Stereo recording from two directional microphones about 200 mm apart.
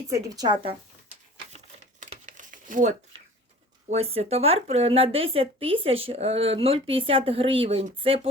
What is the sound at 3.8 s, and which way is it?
Speech, 30° right (ahead or behind).